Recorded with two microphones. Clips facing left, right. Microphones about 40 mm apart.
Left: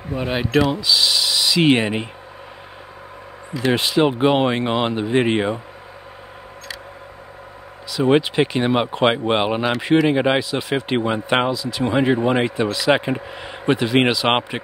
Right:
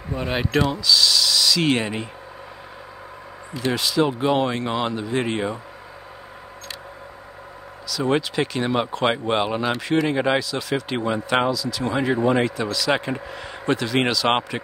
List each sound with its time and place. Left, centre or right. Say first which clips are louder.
0.1 s speech: left 3 dB; centre
0.7 s speech: left 1 dB; left
3.7 s speech: left 3 dB; left
7.9 s speech: left 5 dB; left